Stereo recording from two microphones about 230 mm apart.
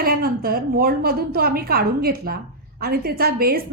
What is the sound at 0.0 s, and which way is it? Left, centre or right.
A woman's voice, right.